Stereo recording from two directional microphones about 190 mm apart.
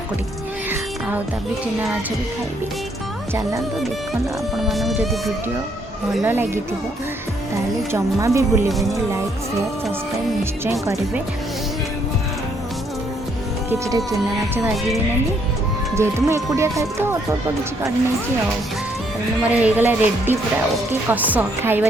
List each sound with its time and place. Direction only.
0.7 s music: 10° right (ahead or behind)
4.5 s music: centre (ahead or behind)
6.2 s speech: 10° right (ahead or behind)
7.9 s speech: 15° right (ahead or behind)
8.7 s music: centre (ahead or behind)
10.7 s speech: 15° right (ahead or behind)
13.7 s speech: 15° right (ahead or behind)
16.0 s speech: 15° right (ahead or behind)
19.4 s speech: 10° right (ahead or behind)